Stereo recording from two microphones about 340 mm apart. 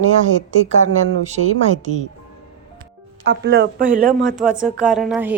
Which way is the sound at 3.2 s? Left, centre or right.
Right.